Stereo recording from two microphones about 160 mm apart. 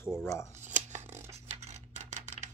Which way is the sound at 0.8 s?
45° right (ahead or behind).